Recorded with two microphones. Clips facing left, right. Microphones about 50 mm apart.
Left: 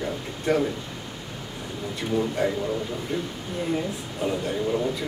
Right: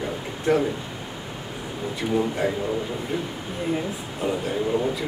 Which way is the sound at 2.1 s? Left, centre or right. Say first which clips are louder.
Even; centre.